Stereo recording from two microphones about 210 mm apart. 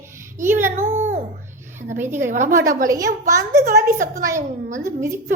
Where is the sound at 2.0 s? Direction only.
10° right (ahead or behind).